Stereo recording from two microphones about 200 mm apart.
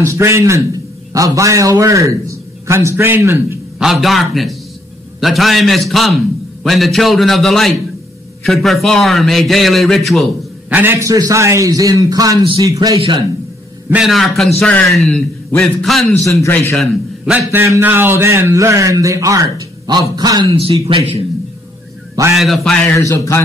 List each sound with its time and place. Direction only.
0.0 s a man's voice: 15° right (ahead or behind)
3.8 s a man's voice: centre (ahead or behind)
10.7 s a man's voice: 10° right (ahead or behind)
13.8 s a man's voice: 5° right (ahead or behind)
16.3 s a man's voice: 15° left (ahead or behind)
16.7 s a man's voice: centre (ahead or behind); by 20.4 s 20° right (ahead or behind)
20.5 s a man's voice: 30° right (ahead or behind)
22.3 s a man's voice: centre (ahead or behind)
22.9 s a man's voice: 15° left (ahead or behind)